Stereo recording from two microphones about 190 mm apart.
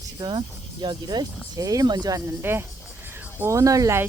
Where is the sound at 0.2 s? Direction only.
25° right (ahead or behind).